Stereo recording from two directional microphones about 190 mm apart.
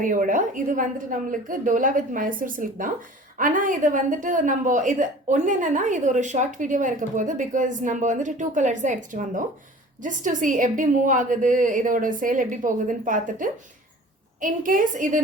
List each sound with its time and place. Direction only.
0.0 s a woman's voice: 45° right (ahead or behind)